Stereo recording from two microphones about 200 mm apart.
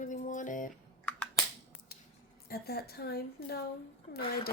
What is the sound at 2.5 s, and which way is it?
Speech, 50° left (ahead or behind).